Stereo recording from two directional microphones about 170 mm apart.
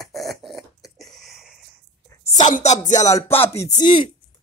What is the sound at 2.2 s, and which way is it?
Speech, 45° left (ahead or behind).